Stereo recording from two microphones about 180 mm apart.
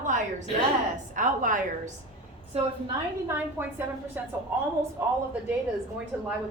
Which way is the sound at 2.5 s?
35° right (ahead or behind).